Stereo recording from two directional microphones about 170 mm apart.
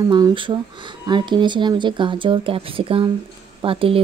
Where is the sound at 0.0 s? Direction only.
25° right (ahead or behind).